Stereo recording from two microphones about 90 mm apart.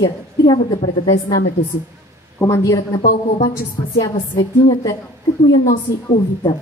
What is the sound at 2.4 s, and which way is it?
Speech, 30° left (ahead or behind).